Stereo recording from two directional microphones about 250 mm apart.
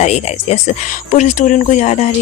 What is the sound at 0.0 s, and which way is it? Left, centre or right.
Speech, left.